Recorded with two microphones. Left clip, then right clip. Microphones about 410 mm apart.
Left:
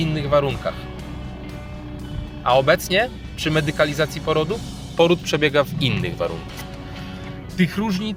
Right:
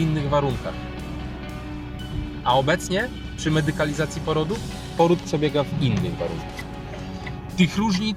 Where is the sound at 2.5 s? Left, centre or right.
Left.